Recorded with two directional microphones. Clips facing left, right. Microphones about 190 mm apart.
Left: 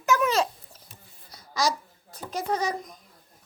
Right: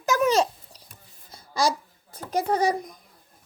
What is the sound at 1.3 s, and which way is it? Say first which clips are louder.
Babbling: right 2 dB; 30° right (ahead or behind).